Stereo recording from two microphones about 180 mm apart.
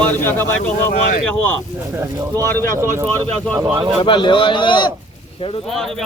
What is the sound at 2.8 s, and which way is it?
Speech, 15° right (ahead or behind).